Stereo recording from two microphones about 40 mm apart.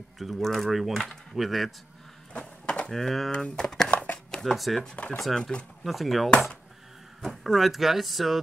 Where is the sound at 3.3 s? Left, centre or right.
Left.